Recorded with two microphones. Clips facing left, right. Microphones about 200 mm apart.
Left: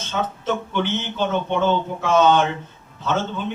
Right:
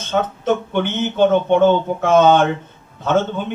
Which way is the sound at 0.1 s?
55° right (ahead or behind).